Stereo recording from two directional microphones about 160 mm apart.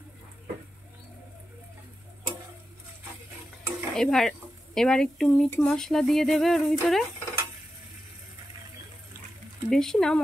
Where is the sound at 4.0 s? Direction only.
5° left (ahead or behind).